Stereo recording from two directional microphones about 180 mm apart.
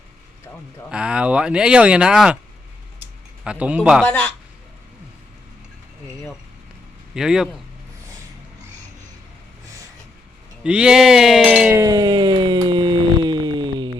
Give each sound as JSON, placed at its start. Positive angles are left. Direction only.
{"t": 0.9, "sound": "speech", "side_deg": -5}
{"t": 3.4, "sound": "speech", "side_deg": -5}
{"t": 4.0, "sound": "a man's voice", "side_deg": 10}
{"t": 7.1, "sound": "speech", "side_deg": -5}
{"t": 10.6, "sound": "speech", "side_deg": -5}
{"t": 11.8, "sound": "a sound", "side_deg": -20}